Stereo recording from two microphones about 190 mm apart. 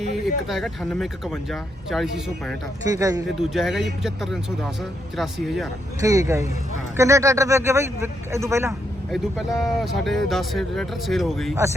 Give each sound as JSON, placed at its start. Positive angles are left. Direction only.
{"t": 0.4, "sound": "speech", "side_deg": 0}
{"t": 2.8, "sound": "speech", "side_deg": -15}
{"t": 3.3, "sound": "speech", "side_deg": 0}
{"t": 6.0, "sound": "speech", "side_deg": -15}
{"t": 9.1, "sound": "speech", "side_deg": 0}